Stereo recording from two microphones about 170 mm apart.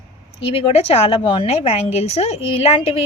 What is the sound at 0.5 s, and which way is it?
A woman's voice, 35° left (ahead or behind).